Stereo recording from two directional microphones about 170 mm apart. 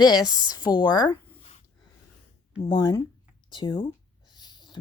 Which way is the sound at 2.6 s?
25° left (ahead or behind).